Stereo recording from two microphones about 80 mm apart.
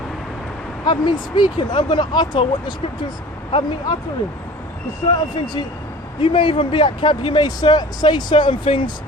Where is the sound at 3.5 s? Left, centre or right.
Left.